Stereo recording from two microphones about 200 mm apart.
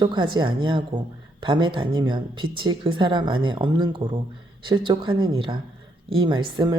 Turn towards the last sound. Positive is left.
turn(degrees=-20)  # may be behind; listen again after turning